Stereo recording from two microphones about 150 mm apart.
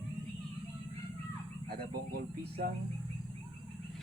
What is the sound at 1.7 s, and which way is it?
Speech, 90° right.